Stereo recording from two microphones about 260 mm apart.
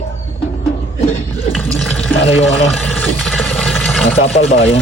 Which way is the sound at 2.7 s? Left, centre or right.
Centre.